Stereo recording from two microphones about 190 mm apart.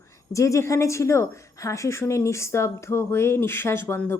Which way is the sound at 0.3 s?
15° left (ahead or behind).